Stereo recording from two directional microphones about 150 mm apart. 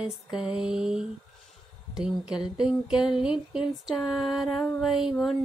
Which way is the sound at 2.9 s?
30° left (ahead or behind).